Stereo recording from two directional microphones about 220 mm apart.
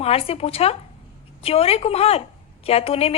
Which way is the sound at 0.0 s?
25° left (ahead or behind).